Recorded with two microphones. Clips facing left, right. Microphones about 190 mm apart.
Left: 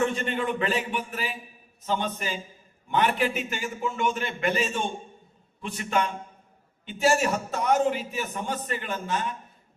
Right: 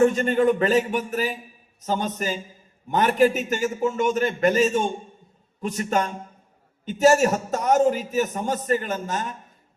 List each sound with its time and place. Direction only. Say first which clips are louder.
0.0 s a man's voice: right 8 dB; 40° right (ahead or behind)